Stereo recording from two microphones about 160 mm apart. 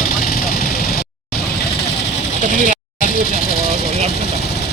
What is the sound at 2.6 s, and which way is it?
Vehicle, 55° left (ahead or behind).